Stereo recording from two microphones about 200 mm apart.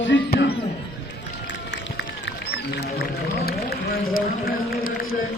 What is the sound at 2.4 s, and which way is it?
A man's voice, 55° left (ahead or behind).